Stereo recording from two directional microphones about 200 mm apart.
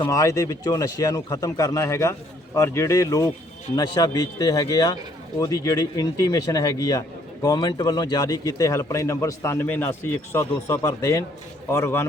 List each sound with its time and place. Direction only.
0.0 s a man's voice: 15° left (ahead or behind)